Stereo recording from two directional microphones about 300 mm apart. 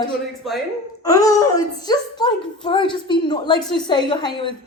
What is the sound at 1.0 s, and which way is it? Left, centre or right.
Speech, centre.